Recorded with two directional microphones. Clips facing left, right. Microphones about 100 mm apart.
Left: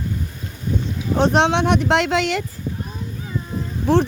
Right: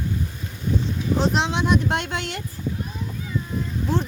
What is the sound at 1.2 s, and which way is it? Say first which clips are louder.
Speech: left 7 dB; 60° left (ahead or behind).